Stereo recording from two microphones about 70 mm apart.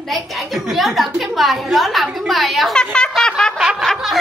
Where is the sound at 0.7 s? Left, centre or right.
Centre.